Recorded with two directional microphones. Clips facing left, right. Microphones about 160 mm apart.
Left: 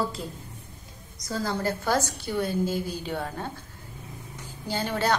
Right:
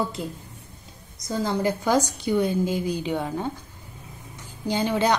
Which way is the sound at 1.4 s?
15° right (ahead or behind).